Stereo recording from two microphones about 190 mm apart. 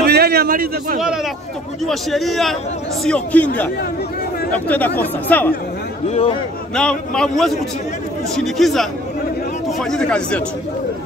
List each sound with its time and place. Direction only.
0.0 s a sound: 55° right (ahead or behind)
1.9 s a man's voice: centre (ahead or behind)
6.0 s a man's voice: 30° left (ahead or behind)
6.7 s a man's voice: 5° left (ahead or behind)
9.8 s a man's voice: 5° left (ahead or behind)